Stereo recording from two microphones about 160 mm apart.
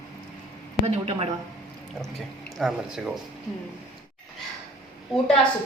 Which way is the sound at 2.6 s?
5° right (ahead or behind).